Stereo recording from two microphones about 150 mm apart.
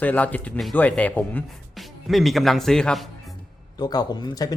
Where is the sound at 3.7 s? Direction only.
25° left (ahead or behind).